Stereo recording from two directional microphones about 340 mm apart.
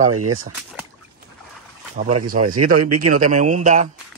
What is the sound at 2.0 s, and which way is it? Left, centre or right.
Speech, centre.